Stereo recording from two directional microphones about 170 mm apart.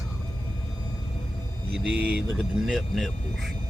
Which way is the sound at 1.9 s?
5° right (ahead or behind).